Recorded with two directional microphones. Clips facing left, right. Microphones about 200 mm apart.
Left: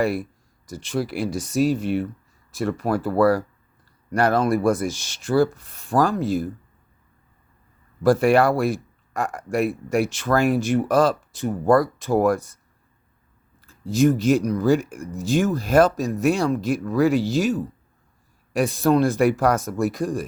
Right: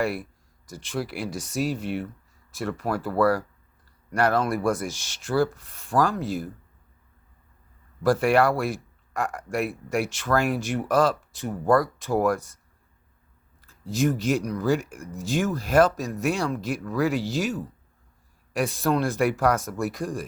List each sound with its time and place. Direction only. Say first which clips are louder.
0.7 s speech: left 5 dB; 20° left (ahead or behind)
8.0 s speech: left 4 dB; 25° left (ahead or behind)
9.1 s speech: left 4 dB; 35° left (ahead or behind)
10.9 s speech: even; 20° left (ahead or behind)
12.1 s speech: left 4 dB; 30° left (ahead or behind)
14.3 s speech: left 5 dB; 30° left (ahead or behind)
19.3 s speech: left 3 dB; 35° left (ahead or behind)